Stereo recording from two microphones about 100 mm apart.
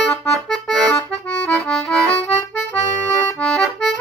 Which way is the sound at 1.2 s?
10° left (ahead or behind).